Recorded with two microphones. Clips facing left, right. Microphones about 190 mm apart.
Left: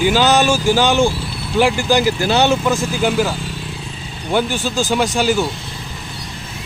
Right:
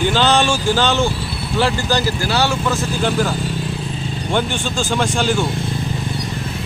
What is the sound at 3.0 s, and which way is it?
Speech, 10° left (ahead or behind).